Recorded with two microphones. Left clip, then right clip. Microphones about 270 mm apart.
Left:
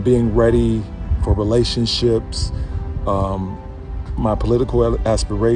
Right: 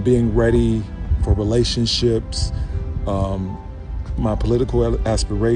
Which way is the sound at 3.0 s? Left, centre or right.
Left.